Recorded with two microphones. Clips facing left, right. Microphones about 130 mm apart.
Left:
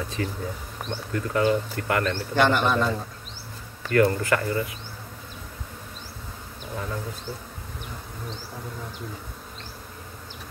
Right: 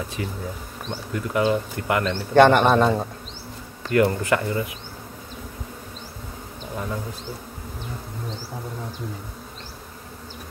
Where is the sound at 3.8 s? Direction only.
20° right (ahead or behind).